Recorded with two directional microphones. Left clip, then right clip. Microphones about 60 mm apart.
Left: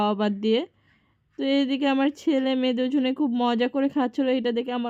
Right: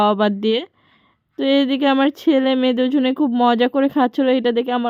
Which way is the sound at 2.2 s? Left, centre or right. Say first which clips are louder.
Right 7 dB; right.